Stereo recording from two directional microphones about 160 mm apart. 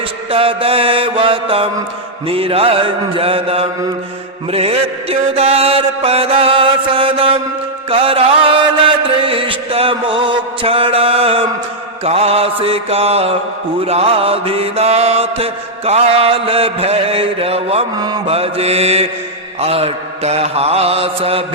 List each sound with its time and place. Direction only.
0.3 s mantra: 35° right (ahead or behind)
7.9 s music: 35° right (ahead or behind)
12.0 s mantra: 40° right (ahead or behind)
17.9 s mantra: 25° right (ahead or behind)
18.3 s mantra: 35° right (ahead or behind)